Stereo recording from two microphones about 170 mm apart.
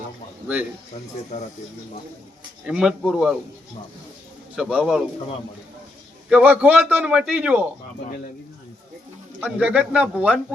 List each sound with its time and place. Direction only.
1.3 s speech: 45° left (ahead or behind)
2.6 s speech: 5° right (ahead or behind)
4.5 s speech: 5° right (ahead or behind)
6.3 s a man's voice: 10° right (ahead or behind)
9.4 s a man's voice: 10° right (ahead or behind)